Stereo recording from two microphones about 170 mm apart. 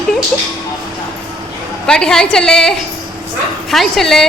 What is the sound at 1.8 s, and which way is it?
Speech, 5° left (ahead or behind).